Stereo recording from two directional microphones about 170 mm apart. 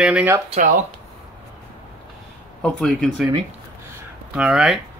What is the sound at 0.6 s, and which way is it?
Speech, 50° right (ahead or behind).